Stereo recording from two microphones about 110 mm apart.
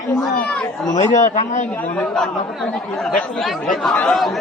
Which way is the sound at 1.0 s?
90° left.